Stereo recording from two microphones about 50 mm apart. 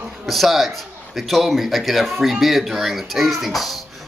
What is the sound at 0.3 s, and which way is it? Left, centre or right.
A child's voice, centre.